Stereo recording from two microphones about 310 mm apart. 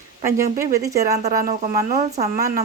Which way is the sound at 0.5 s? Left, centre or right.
Centre.